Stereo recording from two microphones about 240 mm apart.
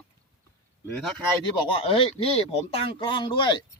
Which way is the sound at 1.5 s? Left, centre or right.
Left.